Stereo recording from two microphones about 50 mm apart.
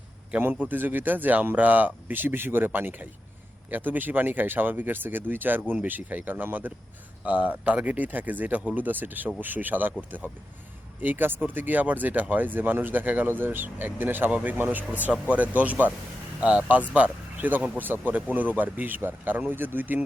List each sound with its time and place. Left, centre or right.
0.5 s speech: right
7.3 s speech: right
14.3 s speech: right